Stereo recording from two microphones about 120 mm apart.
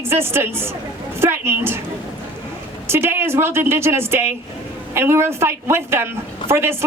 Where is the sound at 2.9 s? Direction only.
20° right (ahead or behind).